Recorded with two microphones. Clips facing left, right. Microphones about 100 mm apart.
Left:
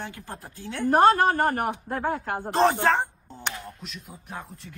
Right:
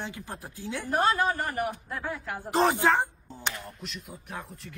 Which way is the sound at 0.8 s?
55° left (ahead or behind).